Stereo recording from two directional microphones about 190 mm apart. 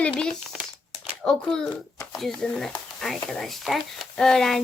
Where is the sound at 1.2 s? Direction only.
5° left (ahead or behind).